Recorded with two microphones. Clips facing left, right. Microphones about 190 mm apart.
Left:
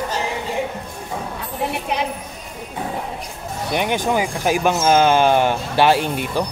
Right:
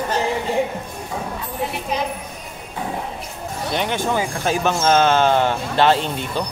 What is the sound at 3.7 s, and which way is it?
Speech, 15° left (ahead or behind).